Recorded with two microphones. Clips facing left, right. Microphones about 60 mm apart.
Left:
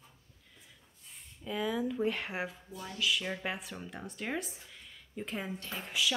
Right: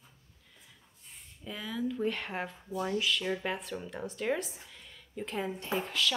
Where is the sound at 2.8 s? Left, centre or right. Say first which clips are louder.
Right 7 dB; right.